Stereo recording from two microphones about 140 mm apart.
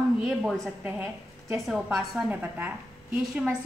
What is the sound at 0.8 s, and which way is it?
Speech, 15° right (ahead or behind).